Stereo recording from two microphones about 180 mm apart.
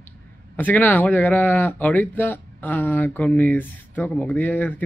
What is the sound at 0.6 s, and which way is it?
Speech, 10° left (ahead or behind).